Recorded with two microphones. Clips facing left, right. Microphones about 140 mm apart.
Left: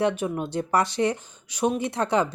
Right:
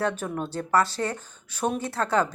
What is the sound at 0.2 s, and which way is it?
Speech, 10° left (ahead or behind).